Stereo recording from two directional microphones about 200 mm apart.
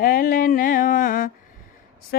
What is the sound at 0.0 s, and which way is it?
Mantra, 45° left (ahead or behind).